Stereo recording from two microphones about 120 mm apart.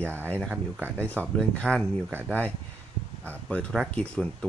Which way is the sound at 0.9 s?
10° left (ahead or behind).